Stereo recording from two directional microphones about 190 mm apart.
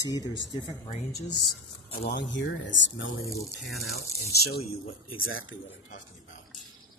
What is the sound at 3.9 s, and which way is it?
Speech, 55° left (ahead or behind).